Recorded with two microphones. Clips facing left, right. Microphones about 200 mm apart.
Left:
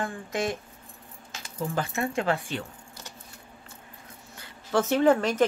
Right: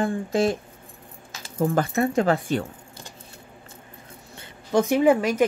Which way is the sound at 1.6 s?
45° right (ahead or behind).